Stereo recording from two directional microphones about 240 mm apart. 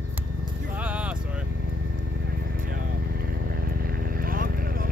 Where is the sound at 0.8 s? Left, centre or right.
Centre.